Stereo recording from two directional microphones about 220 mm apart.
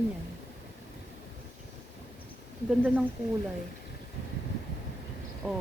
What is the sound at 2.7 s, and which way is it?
Speech, 5° right (ahead or behind).